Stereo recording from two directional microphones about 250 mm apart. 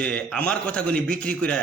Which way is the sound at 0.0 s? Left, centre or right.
Centre.